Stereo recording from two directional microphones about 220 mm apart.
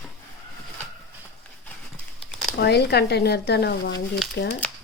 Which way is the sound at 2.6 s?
50° left (ahead or behind).